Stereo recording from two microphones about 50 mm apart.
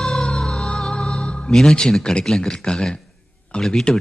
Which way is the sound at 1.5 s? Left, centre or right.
Centre.